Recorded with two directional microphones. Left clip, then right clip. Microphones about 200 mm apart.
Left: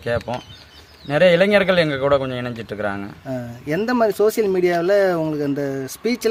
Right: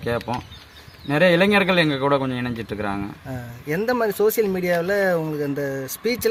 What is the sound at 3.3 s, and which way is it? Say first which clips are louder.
Speech: left 5 dB; 50° left (ahead or behind).